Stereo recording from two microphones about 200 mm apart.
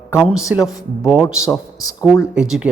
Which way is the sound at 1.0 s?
5° right (ahead or behind).